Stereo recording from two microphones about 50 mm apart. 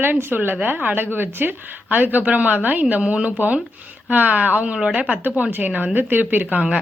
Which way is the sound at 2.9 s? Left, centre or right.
Right.